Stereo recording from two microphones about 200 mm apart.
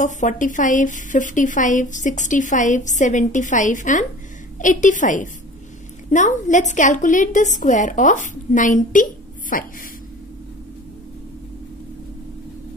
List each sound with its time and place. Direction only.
0.0 s a woman's voice: 40° left (ahead or behind)